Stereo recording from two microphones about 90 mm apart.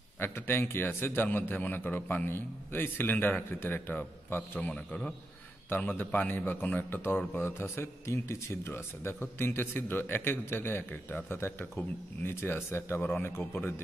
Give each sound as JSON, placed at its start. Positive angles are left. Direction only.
{"t": 0.2, "sound": "a man's voice", "side_deg": 25}